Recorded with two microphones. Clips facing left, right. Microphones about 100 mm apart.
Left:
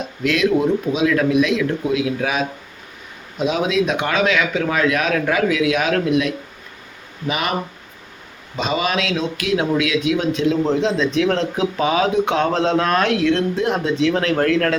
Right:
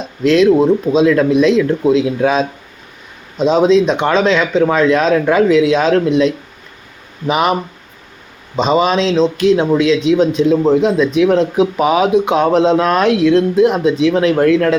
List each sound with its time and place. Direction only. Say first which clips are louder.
0.3 s speech: right 7 dB; 30° right (ahead or behind)
8.5 s speech: right 8 dB; 30° right (ahead or behind)